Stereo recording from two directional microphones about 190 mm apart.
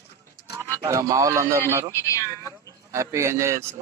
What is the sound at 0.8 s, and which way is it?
Speech, 15° right (ahead or behind).